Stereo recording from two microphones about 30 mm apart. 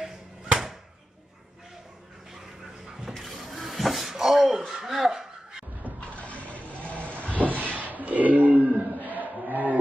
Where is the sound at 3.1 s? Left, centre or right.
Centre.